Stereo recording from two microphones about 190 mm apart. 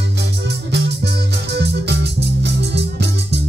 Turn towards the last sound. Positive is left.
turn(degrees=-60)  # may be behind; listen again after turning